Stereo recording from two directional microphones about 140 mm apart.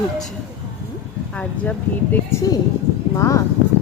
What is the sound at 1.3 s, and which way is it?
Speech, 10° left (ahead or behind).